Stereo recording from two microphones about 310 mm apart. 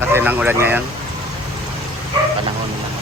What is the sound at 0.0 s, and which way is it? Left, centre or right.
Speech, centre.